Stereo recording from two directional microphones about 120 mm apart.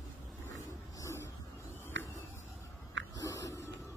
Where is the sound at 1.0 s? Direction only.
20° left (ahead or behind).